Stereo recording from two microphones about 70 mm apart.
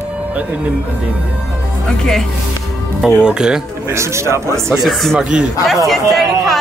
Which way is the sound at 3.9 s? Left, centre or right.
Right.